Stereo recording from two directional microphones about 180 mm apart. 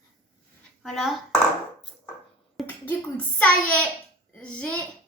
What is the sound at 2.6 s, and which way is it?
A child's voice, 10° left (ahead or behind).